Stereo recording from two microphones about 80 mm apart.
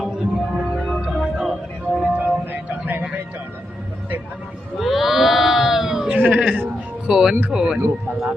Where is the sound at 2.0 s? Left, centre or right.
Centre.